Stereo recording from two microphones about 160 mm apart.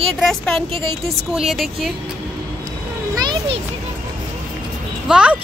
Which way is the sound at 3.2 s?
25° right (ahead or behind).